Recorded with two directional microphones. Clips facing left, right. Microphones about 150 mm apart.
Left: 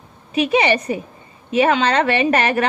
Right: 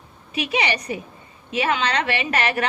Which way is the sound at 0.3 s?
40° left (ahead or behind).